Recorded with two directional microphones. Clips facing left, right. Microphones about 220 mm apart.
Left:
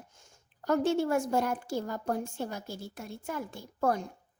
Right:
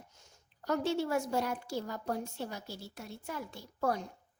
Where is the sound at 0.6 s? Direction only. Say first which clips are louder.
Left 5 dB; 50° left (ahead or behind).